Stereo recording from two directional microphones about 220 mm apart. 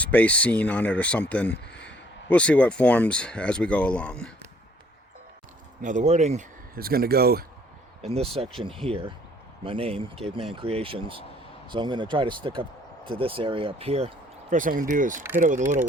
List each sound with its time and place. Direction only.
0.0 s speech: 5° left (ahead or behind)
5.8 s speech: 35° right (ahead or behind)
8.0 s speech: 25° right (ahead or behind)
14.5 s speech: 40° right (ahead or behind)